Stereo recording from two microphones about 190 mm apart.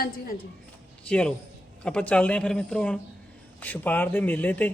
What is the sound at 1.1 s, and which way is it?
Speech, 5° left (ahead or behind).